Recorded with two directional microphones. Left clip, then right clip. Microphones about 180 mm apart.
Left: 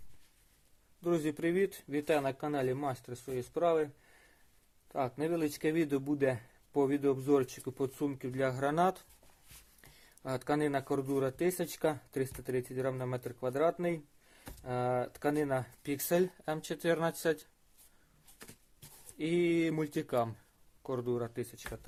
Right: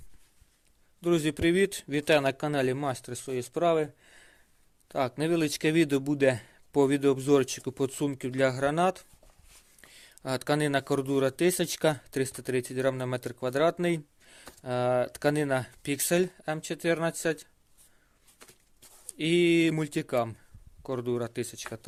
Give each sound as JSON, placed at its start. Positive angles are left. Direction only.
{"t": 1.0, "sound": "speech", "side_deg": -45}
{"t": 4.9, "sound": "speech", "side_deg": -55}
{"t": 19.1, "sound": "speech", "side_deg": -45}